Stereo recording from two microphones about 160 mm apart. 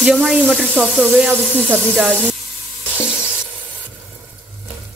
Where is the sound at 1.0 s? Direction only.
10° right (ahead or behind).